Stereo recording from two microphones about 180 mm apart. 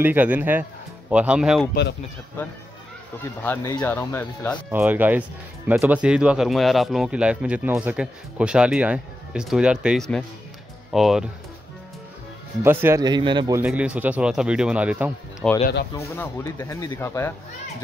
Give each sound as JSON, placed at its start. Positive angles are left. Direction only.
{"t": 0.0, "sound": "a man's voice", "side_deg": -10}
{"t": 1.7, "sound": "speech", "side_deg": 70}
{"t": 3.4, "sound": "speech", "side_deg": 10}
{"t": 4.6, "sound": "a man's voice", "side_deg": -10}
{"t": 12.6, "sound": "a man's voice", "side_deg": -15}
{"t": 13.7, "sound": "a man's voice", "side_deg": -5}
{"t": 15.4, "sound": "speech", "side_deg": 5}
{"t": 16.0, "sound": "speech", "side_deg": 15}